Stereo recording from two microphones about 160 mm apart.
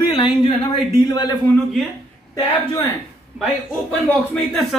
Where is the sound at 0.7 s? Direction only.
25° left (ahead or behind).